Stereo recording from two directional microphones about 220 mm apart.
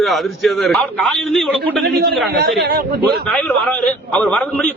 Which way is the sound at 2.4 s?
45° right (ahead or behind).